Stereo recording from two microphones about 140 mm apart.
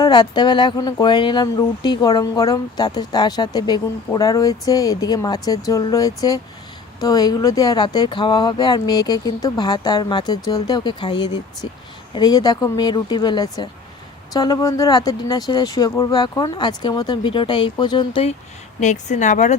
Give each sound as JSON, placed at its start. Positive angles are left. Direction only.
{"t": 0.0, "sound": "speech", "side_deg": 30}
{"t": 18.8, "sound": "speech", "side_deg": 60}